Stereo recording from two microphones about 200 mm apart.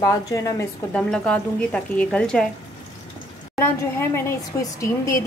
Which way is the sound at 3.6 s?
10° left (ahead or behind).